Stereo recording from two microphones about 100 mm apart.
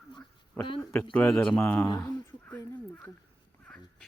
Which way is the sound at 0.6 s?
20° left (ahead or behind).